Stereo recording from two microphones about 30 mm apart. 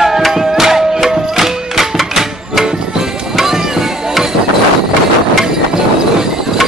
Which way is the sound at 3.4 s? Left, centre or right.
Centre.